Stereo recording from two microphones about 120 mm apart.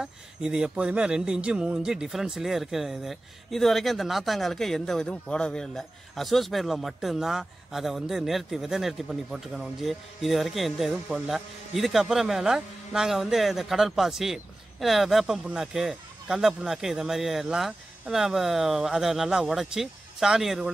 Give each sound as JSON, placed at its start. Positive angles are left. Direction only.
{"t": 0.0, "sound": "speech", "side_deg": -5}